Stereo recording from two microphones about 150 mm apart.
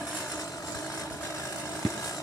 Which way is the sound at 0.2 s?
20° left (ahead or behind).